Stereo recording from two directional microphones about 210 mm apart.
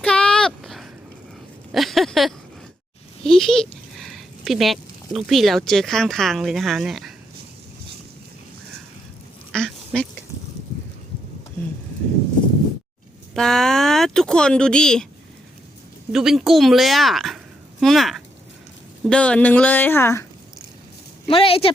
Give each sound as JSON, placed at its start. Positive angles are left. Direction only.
{"t": 0.0, "sound": "a sound", "side_deg": 5}
{"t": 3.2, "sound": "speech", "side_deg": 0}
{"t": 9.5, "sound": "duck", "side_deg": 5}
{"t": 13.3, "sound": "speech", "side_deg": 5}
{"t": 16.1, "sound": "a woman's voice", "side_deg": 0}
{"t": 21.2, "sound": "speech", "side_deg": 25}